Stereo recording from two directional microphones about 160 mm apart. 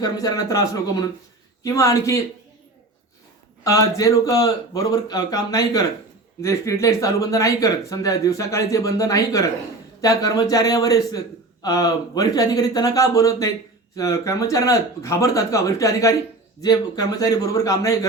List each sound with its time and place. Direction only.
0.0 s speech: 25° left (ahead or behind)
3.6 s speech: 20° left (ahead or behind)